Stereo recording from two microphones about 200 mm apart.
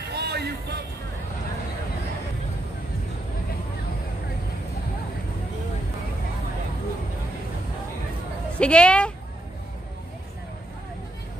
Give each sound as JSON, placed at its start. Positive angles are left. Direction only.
{"t": 0.1, "sound": "music", "side_deg": -55}
{"t": 8.5, "sound": "a woman's voice", "side_deg": 5}